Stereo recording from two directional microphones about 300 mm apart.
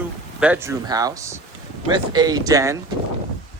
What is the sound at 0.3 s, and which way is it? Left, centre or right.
A man's voice, centre.